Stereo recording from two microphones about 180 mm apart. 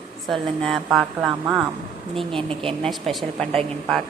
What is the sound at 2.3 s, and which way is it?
Speech, 30° right (ahead or behind).